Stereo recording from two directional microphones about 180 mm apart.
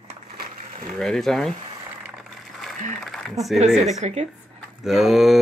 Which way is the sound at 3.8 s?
40° right (ahead or behind).